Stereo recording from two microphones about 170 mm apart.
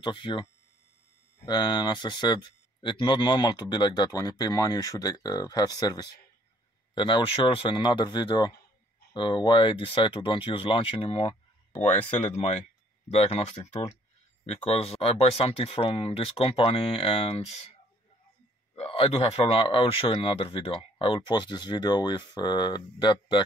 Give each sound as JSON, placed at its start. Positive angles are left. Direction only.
{"t": 0.0, "sound": "speech", "side_deg": 30}
{"t": 11.7, "sound": "speech", "side_deg": 10}
{"t": 13.1, "sound": "speech", "side_deg": 35}
{"t": 18.8, "sound": "speech", "side_deg": 35}